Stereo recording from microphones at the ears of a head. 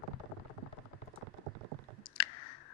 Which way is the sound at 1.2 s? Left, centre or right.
Right.